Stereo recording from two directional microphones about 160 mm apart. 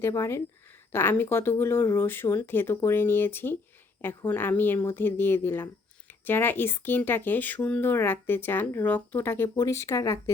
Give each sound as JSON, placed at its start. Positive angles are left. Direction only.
{"t": 0.0, "sound": "speech", "side_deg": 15}